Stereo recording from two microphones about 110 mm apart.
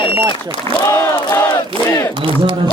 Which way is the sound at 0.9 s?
25° left (ahead or behind).